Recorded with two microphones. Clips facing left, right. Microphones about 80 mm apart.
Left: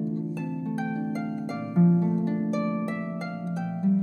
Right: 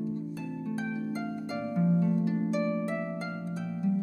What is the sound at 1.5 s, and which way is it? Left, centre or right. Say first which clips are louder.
Harp: left 5 dB; left.